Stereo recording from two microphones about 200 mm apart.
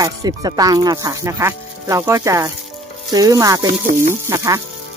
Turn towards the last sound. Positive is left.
turn(degrees=-15)  # may be behind; listen again after turning